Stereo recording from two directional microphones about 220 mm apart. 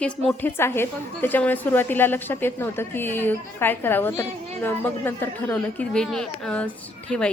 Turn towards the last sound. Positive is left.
turn(degrees=5)  # may be behind; listen again after turning